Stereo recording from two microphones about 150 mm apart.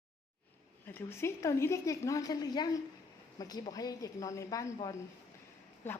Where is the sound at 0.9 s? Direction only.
15° left (ahead or behind).